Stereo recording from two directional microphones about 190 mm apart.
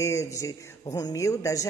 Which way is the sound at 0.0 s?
15° left (ahead or behind).